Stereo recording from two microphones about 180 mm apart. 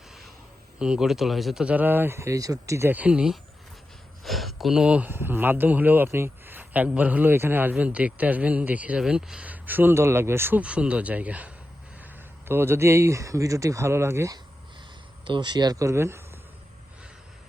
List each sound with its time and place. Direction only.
0.8 s speech: 5° right (ahead or behind)
15.2 s speech: 25° right (ahead or behind)